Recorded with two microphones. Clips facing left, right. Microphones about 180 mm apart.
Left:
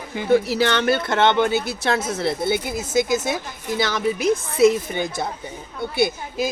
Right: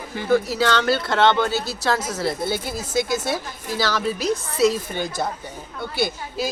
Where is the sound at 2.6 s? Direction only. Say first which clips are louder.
Left 3 dB; 50° left (ahead or behind).